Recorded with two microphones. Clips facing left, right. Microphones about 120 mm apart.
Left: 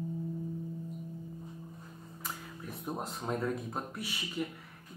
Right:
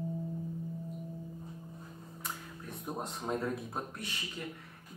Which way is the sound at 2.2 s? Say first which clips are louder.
Left 1 dB; centre (ahead or behind).